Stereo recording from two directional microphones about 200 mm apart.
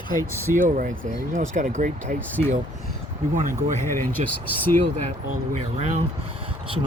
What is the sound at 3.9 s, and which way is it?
Speech, 10° left (ahead or behind).